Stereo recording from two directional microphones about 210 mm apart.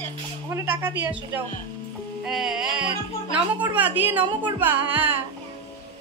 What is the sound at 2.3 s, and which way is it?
A man's voice, centre (ahead or behind).